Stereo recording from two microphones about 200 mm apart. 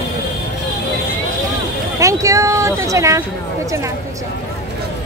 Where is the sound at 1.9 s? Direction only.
15° right (ahead or behind).